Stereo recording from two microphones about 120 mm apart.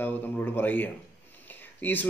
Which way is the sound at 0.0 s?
15° left (ahead or behind).